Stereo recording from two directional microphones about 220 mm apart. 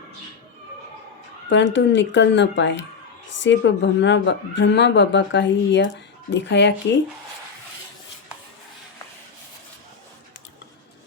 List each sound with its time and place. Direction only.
1.5 s speech: 55° left (ahead or behind)